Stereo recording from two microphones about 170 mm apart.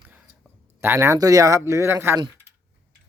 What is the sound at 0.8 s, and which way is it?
Speech, 15° right (ahead or behind).